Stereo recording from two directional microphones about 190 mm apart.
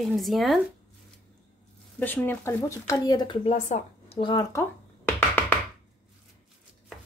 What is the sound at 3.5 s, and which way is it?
Speech, 35° left (ahead or behind).